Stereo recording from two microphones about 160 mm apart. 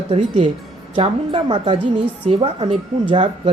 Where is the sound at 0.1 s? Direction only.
40° right (ahead or behind).